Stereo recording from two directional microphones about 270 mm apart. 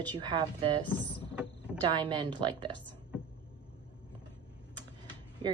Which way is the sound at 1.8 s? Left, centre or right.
Centre.